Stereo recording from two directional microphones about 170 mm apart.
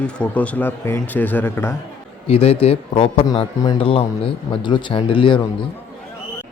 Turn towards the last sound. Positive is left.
turn(degrees=30)  # may be behind; listen again after turning